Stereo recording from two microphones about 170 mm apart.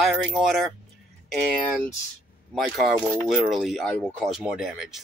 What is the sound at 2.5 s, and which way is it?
Speech, centre (ahead or behind).